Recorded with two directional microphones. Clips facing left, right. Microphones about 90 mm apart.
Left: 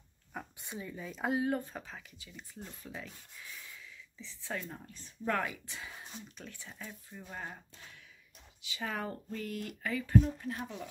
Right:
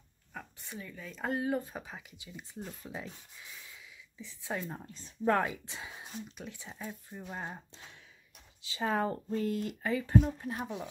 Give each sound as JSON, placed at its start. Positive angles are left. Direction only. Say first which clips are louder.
{"t": 0.3, "sound": "a sound", "louder": "left 1 dB", "side_deg": 15}
{"t": 1.1, "sound": "speech", "louder": "even", "side_deg": 5}
{"t": 1.7, "sound": "speech", "louder": "right 2 dB", "side_deg": -15}